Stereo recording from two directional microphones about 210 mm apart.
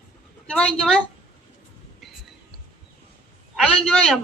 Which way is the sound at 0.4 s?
5° left (ahead or behind).